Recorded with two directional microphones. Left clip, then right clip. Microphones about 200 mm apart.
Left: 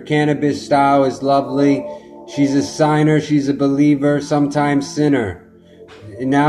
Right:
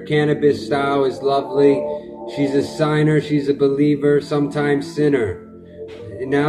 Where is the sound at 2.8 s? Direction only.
20° left (ahead or behind).